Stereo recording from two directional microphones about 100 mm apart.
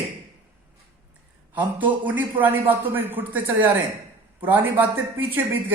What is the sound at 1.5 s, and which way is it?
A man's voice, 15° right (ahead or behind).